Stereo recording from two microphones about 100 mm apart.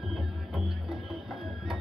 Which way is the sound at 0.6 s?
55° right (ahead or behind).